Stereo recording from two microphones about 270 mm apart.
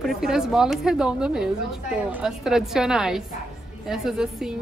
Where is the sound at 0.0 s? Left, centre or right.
Centre.